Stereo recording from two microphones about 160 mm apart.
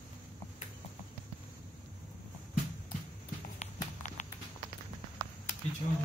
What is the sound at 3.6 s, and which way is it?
Clip-clop, 50° left (ahead or behind).